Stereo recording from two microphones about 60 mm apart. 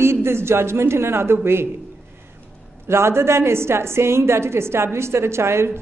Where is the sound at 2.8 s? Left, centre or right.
Right.